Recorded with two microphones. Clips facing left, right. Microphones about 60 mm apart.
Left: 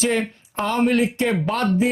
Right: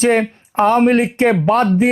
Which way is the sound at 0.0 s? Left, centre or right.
Right.